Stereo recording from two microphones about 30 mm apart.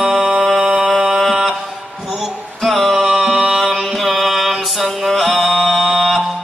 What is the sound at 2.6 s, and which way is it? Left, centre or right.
Music, centre.